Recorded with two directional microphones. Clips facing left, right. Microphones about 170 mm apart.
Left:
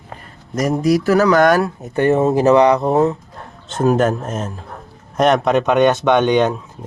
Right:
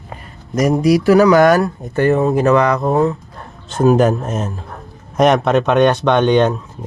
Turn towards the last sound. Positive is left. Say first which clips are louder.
# right 1 dB
turn(degrees=15)  # may be behind; listen again after turning